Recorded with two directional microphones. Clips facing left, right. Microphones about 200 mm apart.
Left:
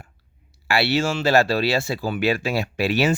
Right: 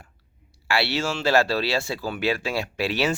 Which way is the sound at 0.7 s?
50° left (ahead or behind).